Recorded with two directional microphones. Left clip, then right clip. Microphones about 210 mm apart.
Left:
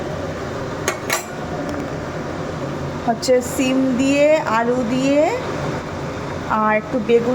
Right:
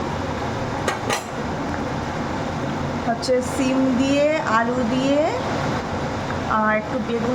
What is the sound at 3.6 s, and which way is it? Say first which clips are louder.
Speech: left 2 dB; 15° left (ahead or behind).